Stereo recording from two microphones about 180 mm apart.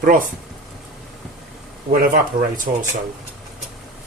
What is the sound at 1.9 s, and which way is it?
Speech, 50° right (ahead or behind).